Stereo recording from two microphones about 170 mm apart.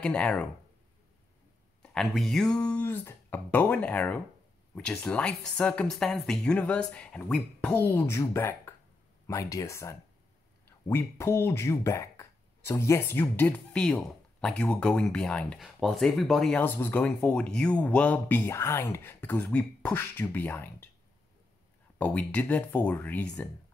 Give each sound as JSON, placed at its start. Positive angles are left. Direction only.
{"t": 0.0, "sound": "speech", "side_deg": 5}
{"t": 1.8, "sound": "speech", "side_deg": 0}
{"t": 21.9, "sound": "speech", "side_deg": 10}